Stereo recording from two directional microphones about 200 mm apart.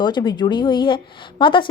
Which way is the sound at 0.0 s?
20° left (ahead or behind).